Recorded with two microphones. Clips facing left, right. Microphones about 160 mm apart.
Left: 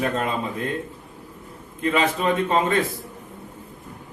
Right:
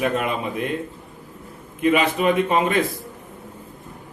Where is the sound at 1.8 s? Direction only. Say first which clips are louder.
Right 3 dB; 15° right (ahead or behind).